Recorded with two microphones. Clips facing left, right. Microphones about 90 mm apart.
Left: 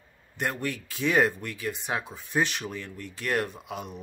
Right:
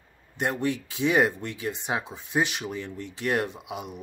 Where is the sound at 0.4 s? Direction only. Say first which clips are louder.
Right 4 dB; 20° right (ahead or behind).